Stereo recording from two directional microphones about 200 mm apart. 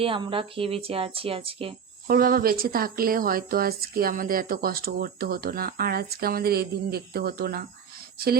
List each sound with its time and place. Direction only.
0.0 s speech: 25° right (ahead or behind)
2.0 s speech: 45° right (ahead or behind)